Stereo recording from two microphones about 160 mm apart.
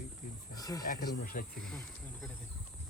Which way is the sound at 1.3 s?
65° left (ahead or behind).